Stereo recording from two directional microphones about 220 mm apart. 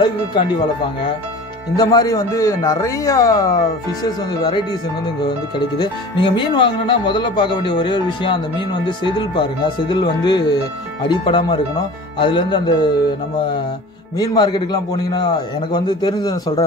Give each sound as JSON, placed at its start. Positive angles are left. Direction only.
{"t": 0.0, "sound": "speech", "side_deg": 20}
{"t": 1.8, "sound": "speech", "side_deg": 15}
{"t": 5.8, "sound": "speech", "side_deg": 20}
{"t": 14.1, "sound": "speech", "side_deg": 20}